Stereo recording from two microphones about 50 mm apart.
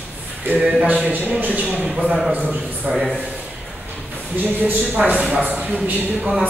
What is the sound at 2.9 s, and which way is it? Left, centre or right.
Speech, centre.